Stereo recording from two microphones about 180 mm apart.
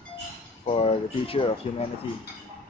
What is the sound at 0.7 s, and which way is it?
Speech, 30° left (ahead or behind).